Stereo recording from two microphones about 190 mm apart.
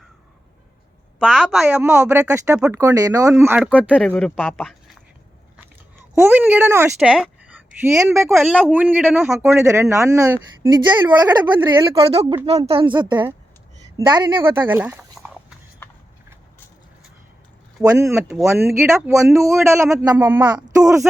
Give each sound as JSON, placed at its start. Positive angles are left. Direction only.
{"t": 1.2, "sound": "a woman's voice", "side_deg": 5}
{"t": 1.8, "sound": "speech", "side_deg": -15}
{"t": 2.6, "sound": "a woman's voice", "side_deg": -5}
{"t": 2.8, "sound": "a woman's voice", "side_deg": -20}
{"t": 6.1, "sound": "a woman's voice", "side_deg": -10}
{"t": 14.7, "sound": "speech", "side_deg": -10}
{"t": 17.8, "sound": "speech", "side_deg": -15}